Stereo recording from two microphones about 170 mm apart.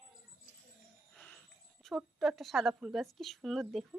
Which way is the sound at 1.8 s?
Centre (ahead or behind).